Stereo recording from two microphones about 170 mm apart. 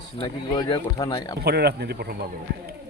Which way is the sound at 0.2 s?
25° left (ahead or behind).